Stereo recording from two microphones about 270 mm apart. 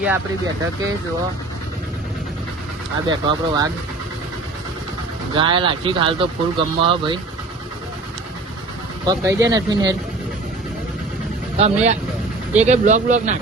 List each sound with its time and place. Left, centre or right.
0.0 s speech: centre
3.1 s speech: centre
5.3 s speech: centre
9.0 s speech: centre
11.5 s speech: right